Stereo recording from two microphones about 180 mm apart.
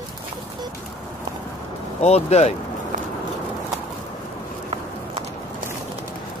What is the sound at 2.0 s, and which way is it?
Speech, 35° left (ahead or behind).